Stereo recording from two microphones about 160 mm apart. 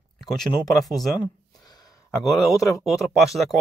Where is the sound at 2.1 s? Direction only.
20° left (ahead or behind).